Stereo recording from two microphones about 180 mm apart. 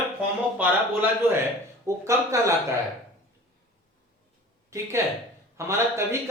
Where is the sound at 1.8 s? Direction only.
15° right (ahead or behind).